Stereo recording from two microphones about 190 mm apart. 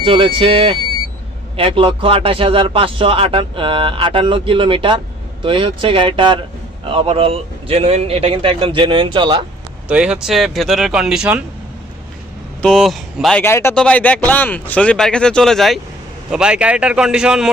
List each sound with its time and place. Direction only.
0.0 s speech: 25° right (ahead or behind)
9.9 s speech: 5° right (ahead or behind)
12.6 s speech: centre (ahead or behind)
13.4 s speech: 10° left (ahead or behind); by 17.5 s 5° right (ahead or behind)